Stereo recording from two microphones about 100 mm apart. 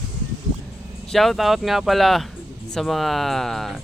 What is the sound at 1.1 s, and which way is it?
Speech, centre (ahead or behind).